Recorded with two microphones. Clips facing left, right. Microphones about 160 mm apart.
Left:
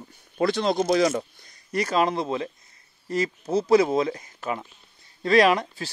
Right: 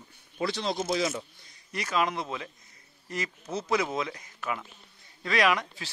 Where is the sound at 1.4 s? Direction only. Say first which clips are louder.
Left 10 dB; 40° left (ahead or behind).